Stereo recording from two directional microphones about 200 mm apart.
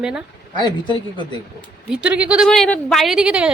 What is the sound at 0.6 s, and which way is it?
Speech, 25° left (ahead or behind).